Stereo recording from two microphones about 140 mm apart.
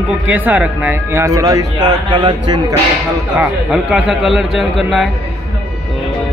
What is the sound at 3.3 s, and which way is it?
Speech, 5° right (ahead or behind).